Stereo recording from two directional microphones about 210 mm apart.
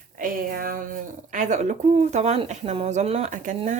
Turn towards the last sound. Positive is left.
turn(degrees=-35)  # may be behind; listen again after turning